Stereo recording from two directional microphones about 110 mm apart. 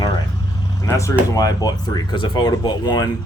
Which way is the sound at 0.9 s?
30° left (ahead or behind).